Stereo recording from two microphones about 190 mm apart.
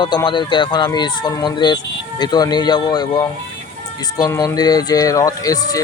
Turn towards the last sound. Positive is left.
turn(degrees=20)  # may be behind; listen again after turning